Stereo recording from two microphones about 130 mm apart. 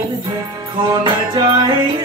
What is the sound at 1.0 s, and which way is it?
Music, 35° right (ahead or behind).